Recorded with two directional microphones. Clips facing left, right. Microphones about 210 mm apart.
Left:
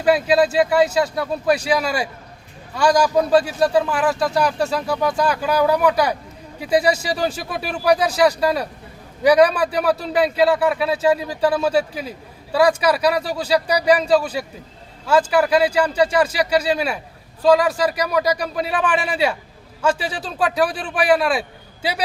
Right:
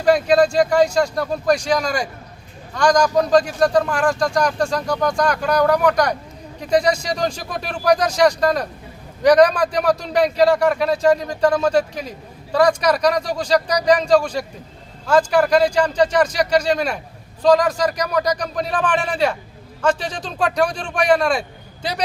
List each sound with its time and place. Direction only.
0.0 s speech: 5° left (ahead or behind)